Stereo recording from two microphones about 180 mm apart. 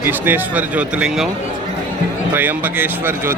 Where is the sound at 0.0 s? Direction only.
10° right (ahead or behind).